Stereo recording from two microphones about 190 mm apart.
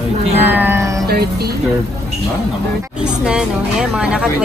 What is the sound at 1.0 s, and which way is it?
Speech, 55° right (ahead or behind).